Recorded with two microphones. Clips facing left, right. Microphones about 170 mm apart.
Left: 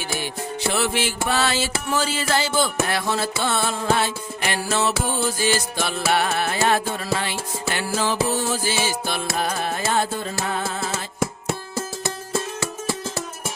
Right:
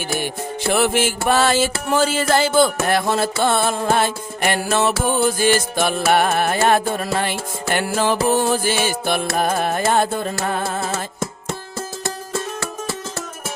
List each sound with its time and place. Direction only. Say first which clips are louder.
0.7 s music: right 7 dB; 50° right (ahead or behind)